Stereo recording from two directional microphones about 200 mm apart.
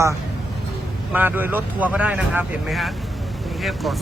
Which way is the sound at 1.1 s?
10° right (ahead or behind).